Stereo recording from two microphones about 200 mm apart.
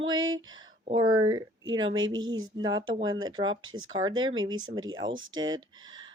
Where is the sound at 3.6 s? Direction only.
90° right.